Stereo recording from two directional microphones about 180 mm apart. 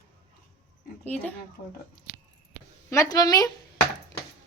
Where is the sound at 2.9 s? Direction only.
20° left (ahead or behind).